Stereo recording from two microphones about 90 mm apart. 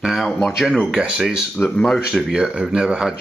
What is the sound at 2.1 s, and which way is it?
Speech, 5° right (ahead or behind).